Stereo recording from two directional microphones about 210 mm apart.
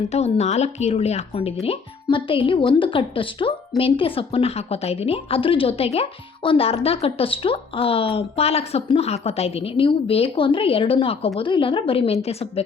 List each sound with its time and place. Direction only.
0.1 s a woman's voice: 30° left (ahead or behind)